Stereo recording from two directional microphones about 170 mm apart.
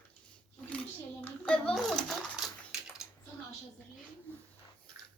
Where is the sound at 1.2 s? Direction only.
5° left (ahead or behind).